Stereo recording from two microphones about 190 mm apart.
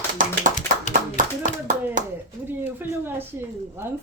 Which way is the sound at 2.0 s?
40° right (ahead or behind).